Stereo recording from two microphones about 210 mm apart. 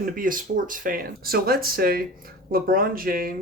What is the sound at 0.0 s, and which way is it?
Speech, 40° right (ahead or behind).